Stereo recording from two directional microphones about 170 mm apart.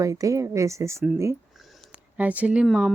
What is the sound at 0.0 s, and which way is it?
Speech, 20° right (ahead or behind).